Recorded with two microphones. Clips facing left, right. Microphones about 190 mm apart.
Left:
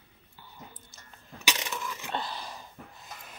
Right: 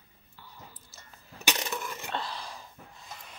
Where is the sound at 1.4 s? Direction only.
50° right (ahead or behind).